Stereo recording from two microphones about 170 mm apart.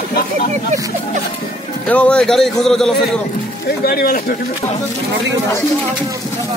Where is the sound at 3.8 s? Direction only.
60° left (ahead or behind).